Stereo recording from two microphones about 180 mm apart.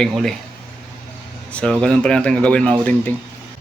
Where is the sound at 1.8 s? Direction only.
5° left (ahead or behind).